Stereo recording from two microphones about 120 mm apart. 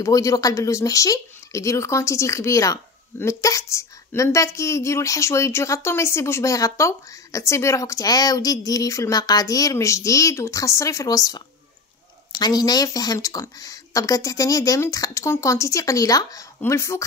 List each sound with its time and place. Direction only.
0.0 s speech: 30° left (ahead or behind)